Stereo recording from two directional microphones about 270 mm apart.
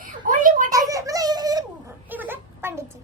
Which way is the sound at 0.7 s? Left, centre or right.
Centre.